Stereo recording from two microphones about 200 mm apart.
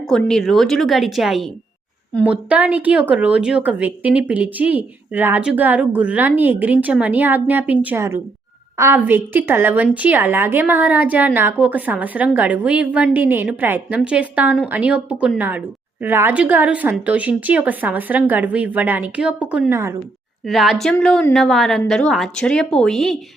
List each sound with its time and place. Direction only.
0.0 s a woman's voice: centre (ahead or behind)
20.4 s a woman's voice: centre (ahead or behind)